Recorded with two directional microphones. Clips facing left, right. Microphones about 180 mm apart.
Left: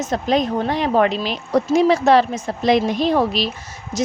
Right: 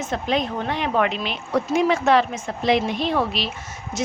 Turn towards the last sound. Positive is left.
turn(degrees=35)  # may be behind; listen again after turning